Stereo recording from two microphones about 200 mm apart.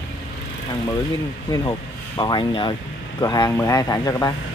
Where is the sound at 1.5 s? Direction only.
20° left (ahead or behind).